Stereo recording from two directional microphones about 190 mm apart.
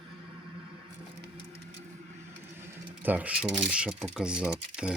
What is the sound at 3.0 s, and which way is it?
Speech, 10° right (ahead or behind).